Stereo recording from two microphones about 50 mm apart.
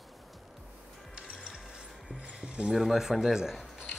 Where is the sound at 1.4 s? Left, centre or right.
Centre.